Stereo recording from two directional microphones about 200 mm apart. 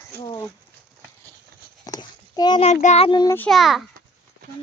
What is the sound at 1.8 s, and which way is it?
A child's voice, 20° left (ahead or behind).